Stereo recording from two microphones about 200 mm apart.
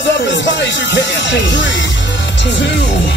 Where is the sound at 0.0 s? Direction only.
65° left (ahead or behind).